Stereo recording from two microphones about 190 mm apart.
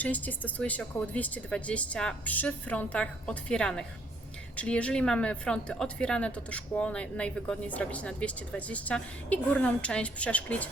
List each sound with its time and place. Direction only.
0.0 s a woman's voice: 10° left (ahead or behind)